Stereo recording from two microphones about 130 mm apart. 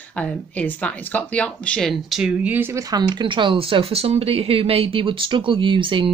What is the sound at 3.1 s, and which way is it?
Speech, 40° right (ahead or behind).